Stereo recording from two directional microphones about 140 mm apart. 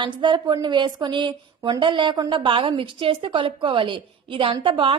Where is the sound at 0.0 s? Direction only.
35° right (ahead or behind).